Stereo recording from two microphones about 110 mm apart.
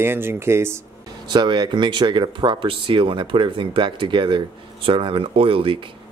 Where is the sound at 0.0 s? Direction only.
20° right (ahead or behind).